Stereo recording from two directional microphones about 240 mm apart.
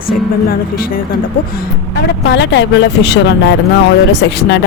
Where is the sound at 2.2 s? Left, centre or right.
Left.